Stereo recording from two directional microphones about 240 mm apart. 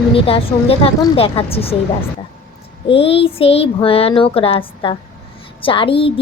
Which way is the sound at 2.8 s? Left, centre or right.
Left.